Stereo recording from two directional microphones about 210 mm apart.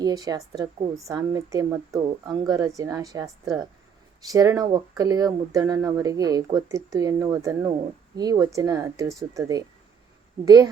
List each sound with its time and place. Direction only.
0.0 s speech: 15° right (ahead or behind)